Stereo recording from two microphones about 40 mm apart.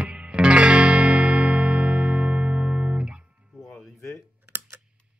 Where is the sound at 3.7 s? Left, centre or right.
Left.